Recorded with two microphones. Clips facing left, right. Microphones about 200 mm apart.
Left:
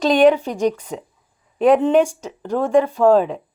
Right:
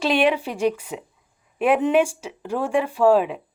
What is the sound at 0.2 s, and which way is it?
Speech, 35° left (ahead or behind).